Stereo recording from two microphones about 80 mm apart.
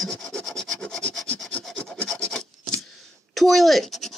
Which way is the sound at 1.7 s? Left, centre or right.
Centre.